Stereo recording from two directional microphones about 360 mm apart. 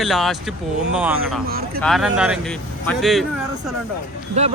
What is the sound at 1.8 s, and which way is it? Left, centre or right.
Speech, centre.